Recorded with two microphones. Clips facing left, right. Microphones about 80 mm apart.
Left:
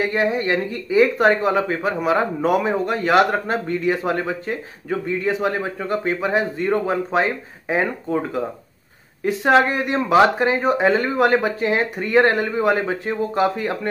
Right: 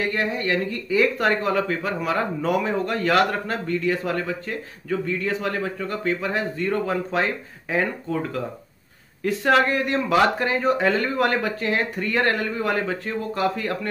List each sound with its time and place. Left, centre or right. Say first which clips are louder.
0.0 s speech: left 4 dB; centre